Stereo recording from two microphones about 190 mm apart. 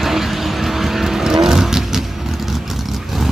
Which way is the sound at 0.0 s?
Centre (ahead or behind).